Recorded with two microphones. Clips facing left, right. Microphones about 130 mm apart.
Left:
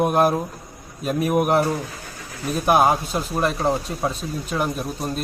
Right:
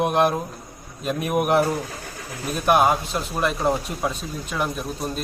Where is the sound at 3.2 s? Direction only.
5° left (ahead or behind).